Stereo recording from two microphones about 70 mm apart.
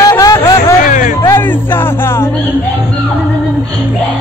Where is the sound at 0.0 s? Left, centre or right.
Left.